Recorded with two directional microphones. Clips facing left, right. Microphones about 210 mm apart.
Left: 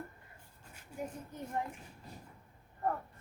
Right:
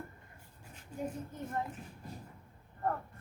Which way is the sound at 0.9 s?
10° left (ahead or behind).